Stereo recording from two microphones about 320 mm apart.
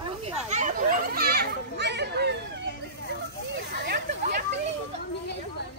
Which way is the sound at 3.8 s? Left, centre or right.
Right.